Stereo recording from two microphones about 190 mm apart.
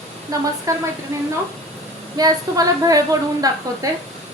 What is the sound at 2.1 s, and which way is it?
A woman's voice, 20° right (ahead or behind).